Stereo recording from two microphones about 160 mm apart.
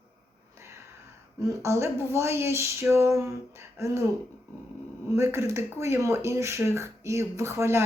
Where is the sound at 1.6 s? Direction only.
15° right (ahead or behind).